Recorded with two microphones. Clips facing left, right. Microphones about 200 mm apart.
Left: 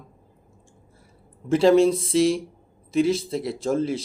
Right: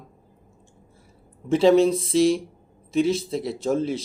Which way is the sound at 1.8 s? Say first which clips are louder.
Left 1 dB; 30° left (ahead or behind).